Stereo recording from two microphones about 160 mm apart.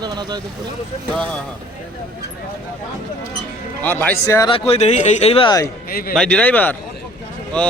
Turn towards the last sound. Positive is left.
turn(degrees=5)  # may be behind; listen again after turning